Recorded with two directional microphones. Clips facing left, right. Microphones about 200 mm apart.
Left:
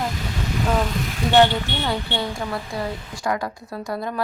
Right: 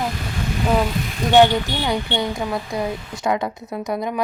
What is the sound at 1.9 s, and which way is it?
A woman's voice, 15° right (ahead or behind).